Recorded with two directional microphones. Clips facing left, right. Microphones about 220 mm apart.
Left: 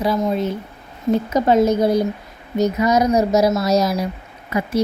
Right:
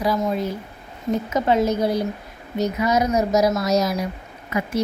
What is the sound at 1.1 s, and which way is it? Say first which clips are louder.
A woman's voice: left 4 dB; 40° left (ahead or behind).